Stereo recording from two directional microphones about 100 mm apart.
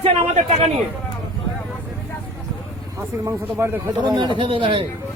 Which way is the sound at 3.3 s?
25° right (ahead or behind).